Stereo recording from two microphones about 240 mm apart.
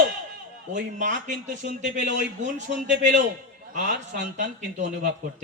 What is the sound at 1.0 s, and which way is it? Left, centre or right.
A man's voice, right.